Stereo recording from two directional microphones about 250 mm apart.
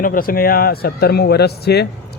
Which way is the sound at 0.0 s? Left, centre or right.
Left.